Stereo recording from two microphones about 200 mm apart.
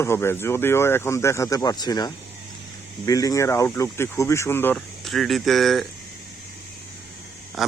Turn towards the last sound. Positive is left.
turn(degrees=0)  # may be behind; listen again after turning